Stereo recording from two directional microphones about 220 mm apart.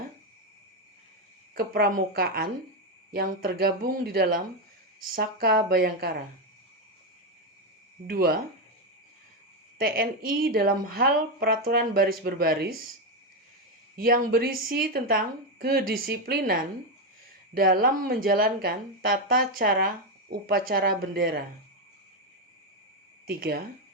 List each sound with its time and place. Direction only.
1.5 s speech: 40° right (ahead or behind)
8.0 s speech: 45° right (ahead or behind)
9.7 s speech: 40° right (ahead or behind)
13.9 s speech: 40° right (ahead or behind)
23.2 s speech: 40° right (ahead or behind)